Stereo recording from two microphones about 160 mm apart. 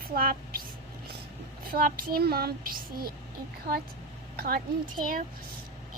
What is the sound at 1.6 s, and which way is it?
Speech, 65° right (ahead or behind).